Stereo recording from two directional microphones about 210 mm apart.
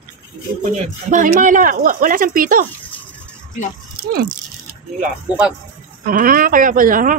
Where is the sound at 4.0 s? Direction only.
45° right (ahead or behind).